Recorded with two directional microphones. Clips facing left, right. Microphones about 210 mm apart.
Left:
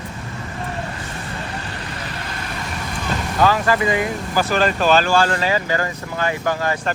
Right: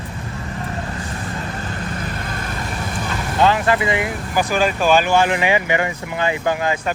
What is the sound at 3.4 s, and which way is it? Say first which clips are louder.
Speech: right 1 dB; 20° right (ahead or behind).